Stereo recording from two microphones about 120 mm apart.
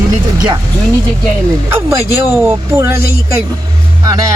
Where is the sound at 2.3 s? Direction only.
15° right (ahead or behind).